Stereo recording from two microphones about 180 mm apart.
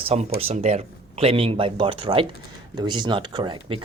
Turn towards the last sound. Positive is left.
turn(degrees=-25)  # may be behind; listen again after turning